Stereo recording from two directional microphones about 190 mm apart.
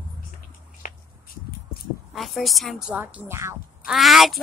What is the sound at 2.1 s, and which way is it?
Speech, centre (ahead or behind).